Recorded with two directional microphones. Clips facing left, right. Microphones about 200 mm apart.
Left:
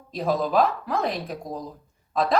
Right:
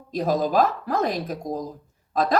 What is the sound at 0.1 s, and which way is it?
A woman's voice, 45° right (ahead or behind).